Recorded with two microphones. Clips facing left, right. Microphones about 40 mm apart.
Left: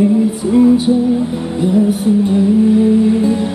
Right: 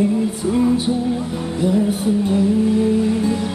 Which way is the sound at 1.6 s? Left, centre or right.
Left.